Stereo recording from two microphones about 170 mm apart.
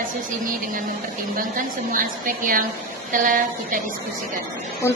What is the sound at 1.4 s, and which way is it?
A woman's voice, 55° right (ahead or behind).